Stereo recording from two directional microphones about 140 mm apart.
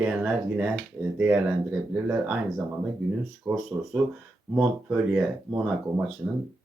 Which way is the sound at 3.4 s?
15° right (ahead or behind).